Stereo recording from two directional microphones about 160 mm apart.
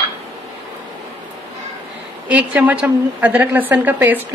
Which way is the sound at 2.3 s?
10° right (ahead or behind).